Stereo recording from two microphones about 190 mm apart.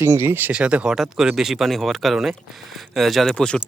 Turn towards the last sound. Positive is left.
turn(degrees=5)  # may be behind; listen again after turning